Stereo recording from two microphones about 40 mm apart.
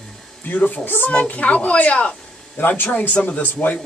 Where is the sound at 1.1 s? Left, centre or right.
Left.